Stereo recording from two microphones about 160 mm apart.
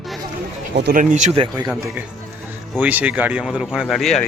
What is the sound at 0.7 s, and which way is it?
Speech, 90° right.